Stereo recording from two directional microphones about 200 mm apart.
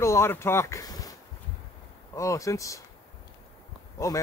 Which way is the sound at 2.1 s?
15° left (ahead or behind).